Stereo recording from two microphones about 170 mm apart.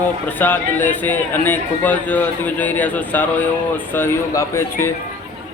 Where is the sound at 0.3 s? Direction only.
10° left (ahead or behind).